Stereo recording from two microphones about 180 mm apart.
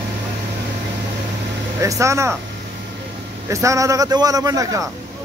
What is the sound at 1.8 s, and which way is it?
Speech, 15° right (ahead or behind).